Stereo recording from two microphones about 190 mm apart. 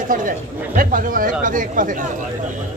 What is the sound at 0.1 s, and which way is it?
Speech, 45° right (ahead or behind).